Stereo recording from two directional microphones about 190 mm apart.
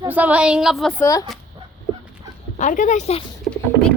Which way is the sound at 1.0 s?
15° left (ahead or behind).